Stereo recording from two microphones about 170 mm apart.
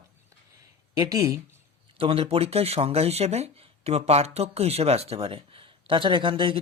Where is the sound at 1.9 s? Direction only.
35° right (ahead or behind).